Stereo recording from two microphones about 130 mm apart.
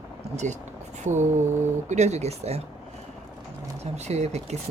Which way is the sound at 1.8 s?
60° right (ahead or behind).